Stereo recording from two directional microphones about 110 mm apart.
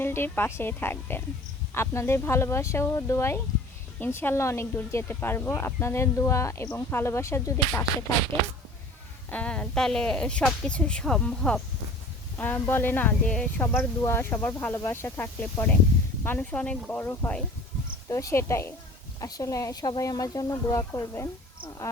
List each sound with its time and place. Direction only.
0.0 s speech: 20° left (ahead or behind)
9.3 s speech: 10° left (ahead or behind)
13.7 s speech: 25° left (ahead or behind)
18.1 s speech: 25° left (ahead or behind)